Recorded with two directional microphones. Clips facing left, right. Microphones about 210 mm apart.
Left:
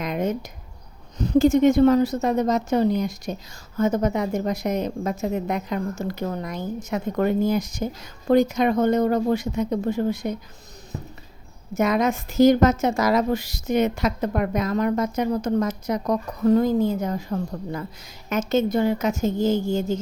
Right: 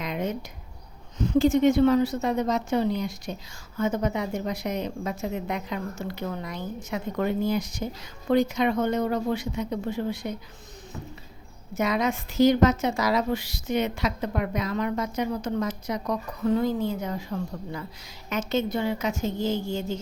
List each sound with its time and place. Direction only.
0.0 s a sound: 45° left (ahead or behind)
1.2 s a woman's voice: 40° left (ahead or behind)
11.7 s a woman's voice: 50° left (ahead or behind)